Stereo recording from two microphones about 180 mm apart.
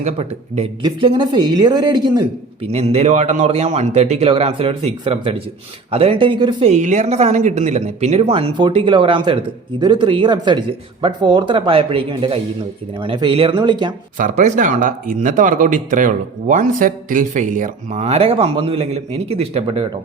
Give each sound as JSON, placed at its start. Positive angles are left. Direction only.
{"t": 0.0, "sound": "speech", "side_deg": -35}
{"t": 2.6, "sound": "speech", "side_deg": -35}
{"t": 14.2, "sound": "speech", "side_deg": -45}